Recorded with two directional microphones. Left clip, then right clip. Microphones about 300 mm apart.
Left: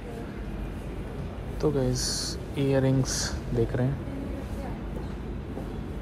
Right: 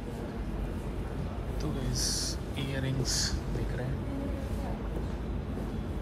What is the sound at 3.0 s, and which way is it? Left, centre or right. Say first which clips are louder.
Speech: left 2 dB; centre.